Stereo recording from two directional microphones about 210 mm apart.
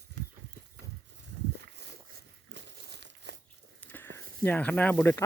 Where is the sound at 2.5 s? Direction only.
55° right (ahead or behind).